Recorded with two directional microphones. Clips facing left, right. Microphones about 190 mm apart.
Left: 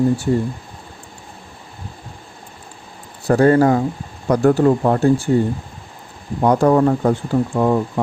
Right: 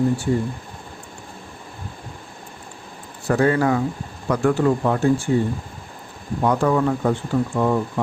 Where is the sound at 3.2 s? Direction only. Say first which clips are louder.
Left 5 dB; 40° left (ahead or behind).